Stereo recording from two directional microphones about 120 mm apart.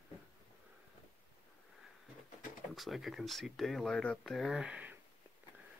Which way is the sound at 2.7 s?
Centre (ahead or behind).